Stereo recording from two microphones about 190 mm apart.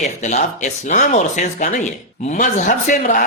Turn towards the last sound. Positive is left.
turn(degrees=45)  # may be behind; listen again after turning